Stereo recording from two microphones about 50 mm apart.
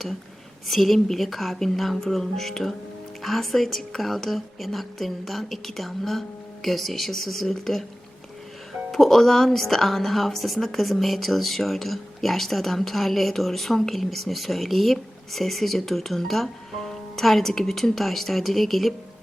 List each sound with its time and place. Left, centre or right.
0.7 s speech: centre
8.9 s speech: centre